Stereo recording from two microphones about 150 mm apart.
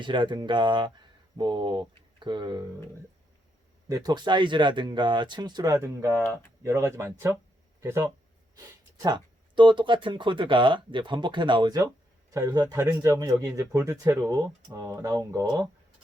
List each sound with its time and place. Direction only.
0.0 s speech: 30° right (ahead or behind)
3.8 s speech: 25° right (ahead or behind)
5.7 s speech: 15° right (ahead or behind)
9.0 s speech: 30° right (ahead or behind)